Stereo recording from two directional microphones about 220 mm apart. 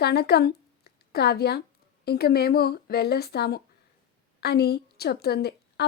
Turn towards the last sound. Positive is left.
turn(degrees=45)  # may be behind; listen again after turning